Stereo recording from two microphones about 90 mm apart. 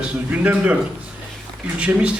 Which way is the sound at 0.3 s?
15° right (ahead or behind).